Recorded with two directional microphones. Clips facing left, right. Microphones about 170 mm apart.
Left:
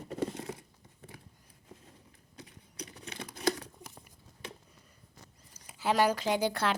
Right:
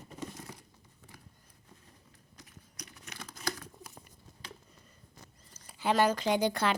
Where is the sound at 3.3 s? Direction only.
30° left (ahead or behind).